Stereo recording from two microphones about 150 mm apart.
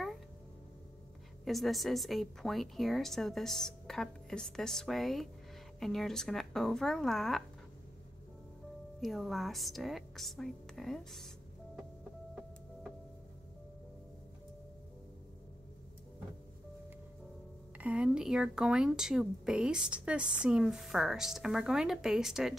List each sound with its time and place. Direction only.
1.4 s speech: centre (ahead or behind)
9.0 s speech: centre (ahead or behind)
17.7 s speech: 10° right (ahead or behind)